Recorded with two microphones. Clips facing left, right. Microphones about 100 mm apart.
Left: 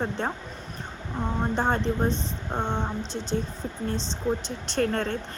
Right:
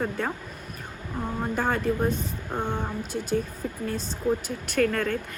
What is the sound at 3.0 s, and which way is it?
Speech, 10° right (ahead or behind).